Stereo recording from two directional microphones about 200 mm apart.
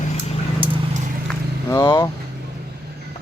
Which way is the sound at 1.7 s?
15° left (ahead or behind).